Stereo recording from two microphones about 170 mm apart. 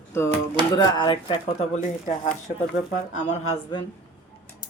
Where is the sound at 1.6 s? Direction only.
45° left (ahead or behind).